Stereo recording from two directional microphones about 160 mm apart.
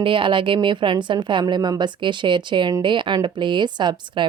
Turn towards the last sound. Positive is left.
turn(degrees=-30)  # may be behind; listen again after turning